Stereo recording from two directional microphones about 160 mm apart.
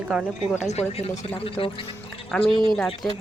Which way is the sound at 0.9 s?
40° left (ahead or behind).